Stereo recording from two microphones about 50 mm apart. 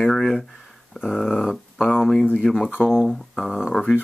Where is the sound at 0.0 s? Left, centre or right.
Centre.